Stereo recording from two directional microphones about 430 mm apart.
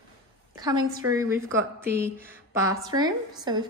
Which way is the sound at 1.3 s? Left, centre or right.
Right.